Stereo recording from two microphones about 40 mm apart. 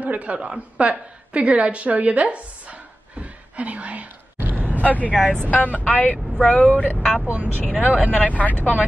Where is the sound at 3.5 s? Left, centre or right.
Right.